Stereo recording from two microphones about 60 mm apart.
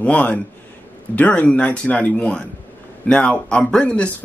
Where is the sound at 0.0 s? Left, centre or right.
Left.